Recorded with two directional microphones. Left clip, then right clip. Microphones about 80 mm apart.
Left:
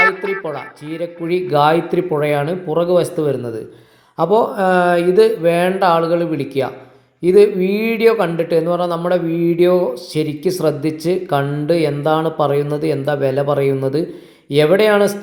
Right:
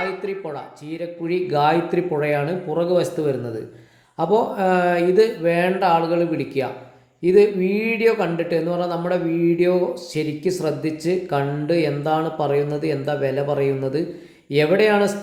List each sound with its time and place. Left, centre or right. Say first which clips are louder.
0.4 s speech: left 6 dB; left